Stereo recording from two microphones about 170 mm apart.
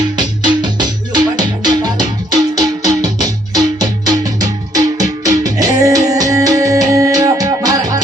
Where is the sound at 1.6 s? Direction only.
25° right (ahead or behind).